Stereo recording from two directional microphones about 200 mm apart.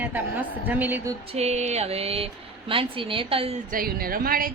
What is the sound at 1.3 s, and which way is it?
Speech, 30° right (ahead or behind).